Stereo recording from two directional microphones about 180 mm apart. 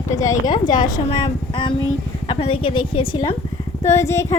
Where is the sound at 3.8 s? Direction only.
15° left (ahead or behind).